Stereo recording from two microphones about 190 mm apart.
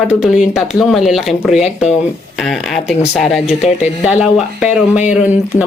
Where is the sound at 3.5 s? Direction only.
35° left (ahead or behind).